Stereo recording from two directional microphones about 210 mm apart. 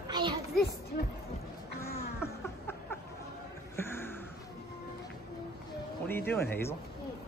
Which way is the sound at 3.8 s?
10° left (ahead or behind).